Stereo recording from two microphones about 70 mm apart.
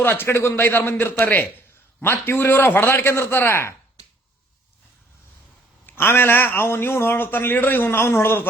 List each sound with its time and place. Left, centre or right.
0.0 s a man's voice: left
5.8 s a man's voice: left